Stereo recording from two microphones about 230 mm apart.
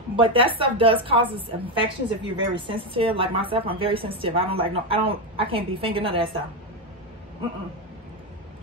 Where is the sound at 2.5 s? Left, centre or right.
Right.